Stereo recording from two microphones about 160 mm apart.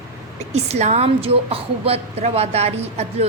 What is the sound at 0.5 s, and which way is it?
A woman's voice, 40° right (ahead or behind).